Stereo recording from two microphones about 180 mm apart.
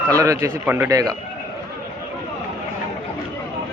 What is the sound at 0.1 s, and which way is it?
A man's voice, 20° right (ahead or behind).